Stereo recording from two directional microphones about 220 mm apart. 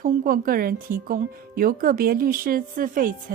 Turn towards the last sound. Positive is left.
turn(degrees=-40)  # may be behind; listen again after turning